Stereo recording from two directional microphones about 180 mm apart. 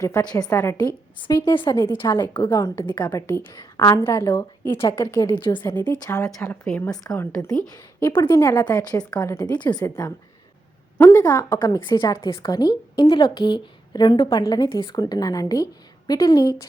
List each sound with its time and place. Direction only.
0.0 s a woman's voice: 20° left (ahead or behind)
6.9 s a woman's voice: 20° left (ahead or behind)